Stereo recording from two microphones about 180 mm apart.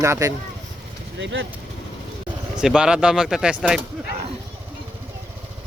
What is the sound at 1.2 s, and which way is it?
Speech, 85° right.